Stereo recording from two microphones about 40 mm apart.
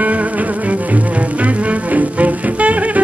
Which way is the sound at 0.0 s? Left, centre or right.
Right.